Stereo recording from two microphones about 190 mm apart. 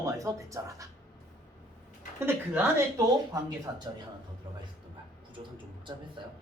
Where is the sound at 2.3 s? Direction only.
15° right (ahead or behind).